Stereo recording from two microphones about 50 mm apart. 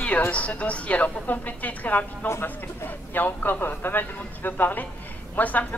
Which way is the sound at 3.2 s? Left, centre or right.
Left.